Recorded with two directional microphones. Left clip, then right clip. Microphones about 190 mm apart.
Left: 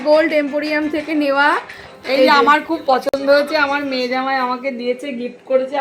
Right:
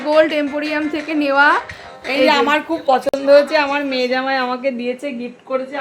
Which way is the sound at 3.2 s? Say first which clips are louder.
Right 5 dB; 15° right (ahead or behind).